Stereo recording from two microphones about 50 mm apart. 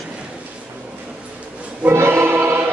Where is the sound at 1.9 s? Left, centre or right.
Right.